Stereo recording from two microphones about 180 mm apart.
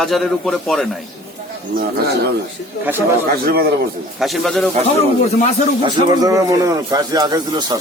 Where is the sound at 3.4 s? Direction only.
60° right (ahead or behind).